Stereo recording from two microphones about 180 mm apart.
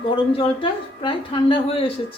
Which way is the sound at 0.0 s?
30° left (ahead or behind).